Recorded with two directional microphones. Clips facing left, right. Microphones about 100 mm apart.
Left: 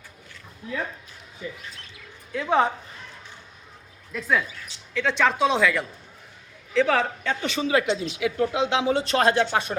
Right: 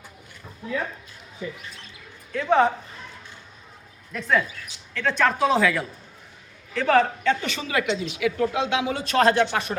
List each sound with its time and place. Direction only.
2.3 s speech: 15° left (ahead or behind)
4.1 s speech: 5° left (ahead or behind)
7.3 s speech: 20° left (ahead or behind)